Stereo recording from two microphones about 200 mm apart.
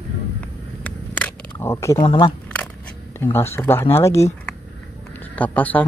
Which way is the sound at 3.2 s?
10° left (ahead or behind).